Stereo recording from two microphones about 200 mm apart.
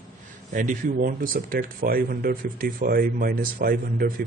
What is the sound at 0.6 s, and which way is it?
Speech, 45° right (ahead or behind).